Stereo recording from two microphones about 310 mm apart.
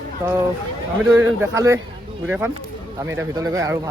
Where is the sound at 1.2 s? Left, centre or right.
Centre.